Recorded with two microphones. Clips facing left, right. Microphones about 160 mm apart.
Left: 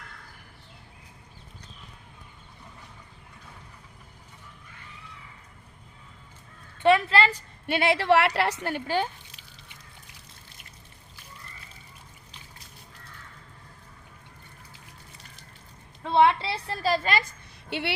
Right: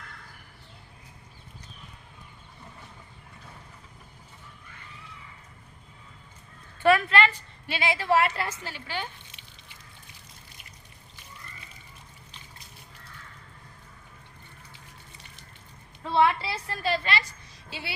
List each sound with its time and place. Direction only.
6.8 s a woman's voice: 30° left (ahead or behind)
7.7 s a woman's voice: 60° left (ahead or behind)
16.0 s a sound: 20° left (ahead or behind); by 17.9 s 65° left (ahead or behind)